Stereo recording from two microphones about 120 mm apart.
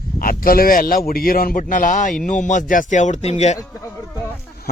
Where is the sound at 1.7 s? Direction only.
90° left; by 3.6 s 65° left (ahead or behind).